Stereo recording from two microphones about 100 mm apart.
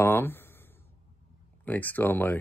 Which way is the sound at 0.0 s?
20° left (ahead or behind).